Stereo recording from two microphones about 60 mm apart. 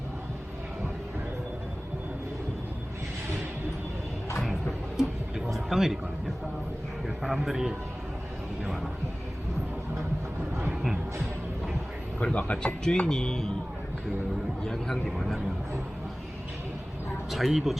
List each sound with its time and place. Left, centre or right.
5.5 s vehicle: centre
7.2 s a man's voice: centre
12.2 s speech: left
12.8 s speech: centre
14.6 s speech: centre
17.3 s a man's voice: centre